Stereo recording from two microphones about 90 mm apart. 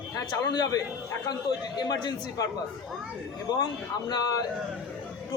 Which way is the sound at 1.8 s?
50° left (ahead or behind).